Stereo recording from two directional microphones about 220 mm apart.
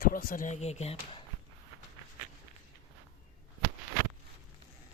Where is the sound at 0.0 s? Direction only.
40° left (ahead or behind).